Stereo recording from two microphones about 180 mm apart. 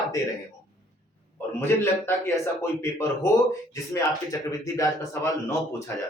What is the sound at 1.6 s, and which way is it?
Speech, 15° left (ahead or behind).